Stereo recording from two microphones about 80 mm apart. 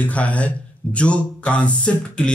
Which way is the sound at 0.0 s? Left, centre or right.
Centre.